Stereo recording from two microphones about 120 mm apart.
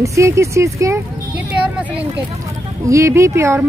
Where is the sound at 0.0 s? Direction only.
25° right (ahead or behind).